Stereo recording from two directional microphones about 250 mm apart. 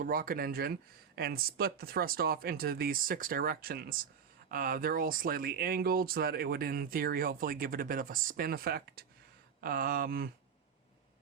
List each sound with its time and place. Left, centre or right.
0.0 s speech: right